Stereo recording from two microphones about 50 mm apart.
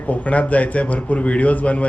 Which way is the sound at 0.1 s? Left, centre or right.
Left.